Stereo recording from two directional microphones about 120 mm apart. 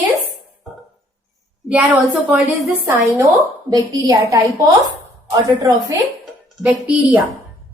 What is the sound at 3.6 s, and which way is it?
Speech, 30° right (ahead or behind).